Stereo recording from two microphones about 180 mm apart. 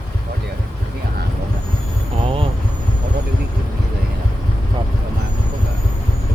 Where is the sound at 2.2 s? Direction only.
30° right (ahead or behind).